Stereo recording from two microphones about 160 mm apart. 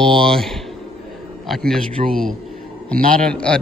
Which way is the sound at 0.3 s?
Centre (ahead or behind).